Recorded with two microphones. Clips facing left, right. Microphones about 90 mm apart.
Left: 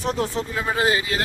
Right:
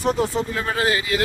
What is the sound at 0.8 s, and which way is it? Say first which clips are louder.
Speech: even; 25° left (ahead or behind).